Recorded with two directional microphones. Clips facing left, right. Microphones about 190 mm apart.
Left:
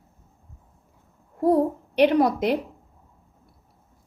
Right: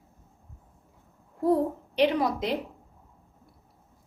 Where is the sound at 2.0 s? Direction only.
60° left (ahead or behind).